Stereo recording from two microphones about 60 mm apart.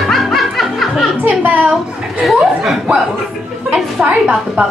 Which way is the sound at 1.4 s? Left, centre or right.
Right.